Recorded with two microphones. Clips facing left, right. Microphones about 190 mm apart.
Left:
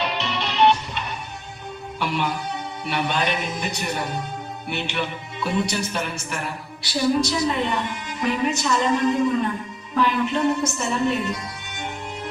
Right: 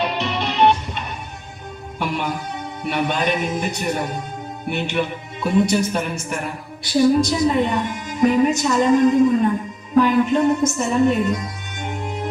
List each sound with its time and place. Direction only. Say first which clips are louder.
0.0 s music: right 4 dB; 50° right (ahead or behind)
2.8 s speech: right 3 dB; 50° right (ahead or behind)
11.8 s music: right 5 dB; 45° right (ahead or behind)